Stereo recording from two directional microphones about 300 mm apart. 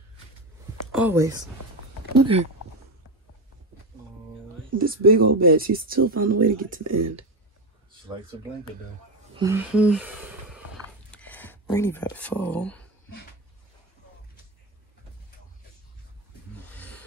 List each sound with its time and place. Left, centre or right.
0.9 s speech: centre
4.6 s speech: right
6.8 s speech: right
9.3 s speech: centre
16.6 s a sound: centre